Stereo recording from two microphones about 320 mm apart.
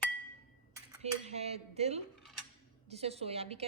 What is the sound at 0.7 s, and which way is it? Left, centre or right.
A woman's voice, centre.